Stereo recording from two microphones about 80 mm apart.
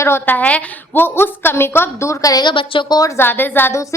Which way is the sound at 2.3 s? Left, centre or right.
Left.